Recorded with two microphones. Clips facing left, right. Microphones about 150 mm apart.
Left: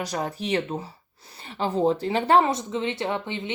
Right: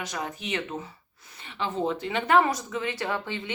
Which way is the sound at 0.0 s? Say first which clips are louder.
Left 5 dB; 35° left (ahead or behind).